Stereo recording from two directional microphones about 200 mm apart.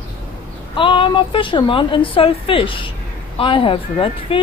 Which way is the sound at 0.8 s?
25° left (ahead or behind).